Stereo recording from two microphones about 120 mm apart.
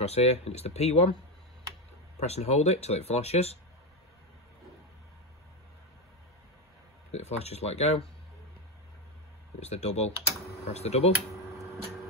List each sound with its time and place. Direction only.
0.0 s speech: 60° left (ahead or behind)
2.1 s speech: 60° left (ahead or behind)
7.1 s speech: 60° left (ahead or behind)
9.6 s speech: 65° left (ahead or behind)
11.3 s a sound: 25° right (ahead or behind)